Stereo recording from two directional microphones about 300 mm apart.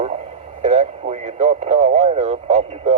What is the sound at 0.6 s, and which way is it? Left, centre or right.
Speech, right.